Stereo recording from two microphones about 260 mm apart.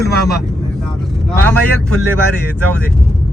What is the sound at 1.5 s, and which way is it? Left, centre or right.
Speech, right.